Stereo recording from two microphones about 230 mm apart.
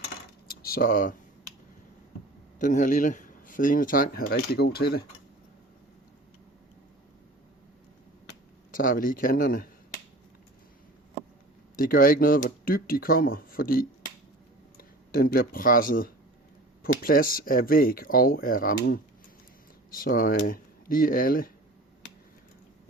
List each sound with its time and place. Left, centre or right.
0.4 s a sound: left
2.6 s speech: left
8.7 s speech: left
11.8 s speech: left
20.0 s speech: left